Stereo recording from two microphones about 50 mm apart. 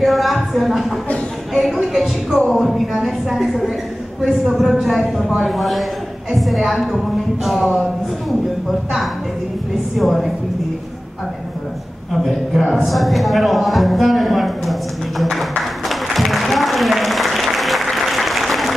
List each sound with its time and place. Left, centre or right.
0.0 s speech: centre
1.5 s a sound: centre
2.5 s a woman's voice: centre
9.9 s a woman's voice: centre
12.1 s a sound: centre
12.8 s speech: centre
15.9 s applause: centre